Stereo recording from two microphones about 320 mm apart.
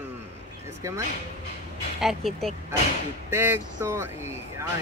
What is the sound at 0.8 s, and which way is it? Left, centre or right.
Speech, centre.